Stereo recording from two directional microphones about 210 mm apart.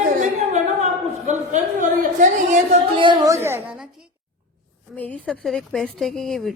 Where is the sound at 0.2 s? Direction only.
35° right (ahead or behind).